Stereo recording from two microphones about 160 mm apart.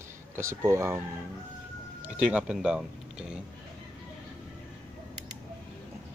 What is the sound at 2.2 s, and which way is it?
Speech, 5° right (ahead or behind).